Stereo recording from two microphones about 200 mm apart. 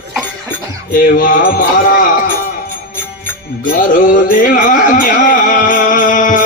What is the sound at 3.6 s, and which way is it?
Music, 40° left (ahead or behind).